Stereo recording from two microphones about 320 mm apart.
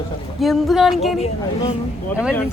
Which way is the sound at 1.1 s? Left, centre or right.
Centre.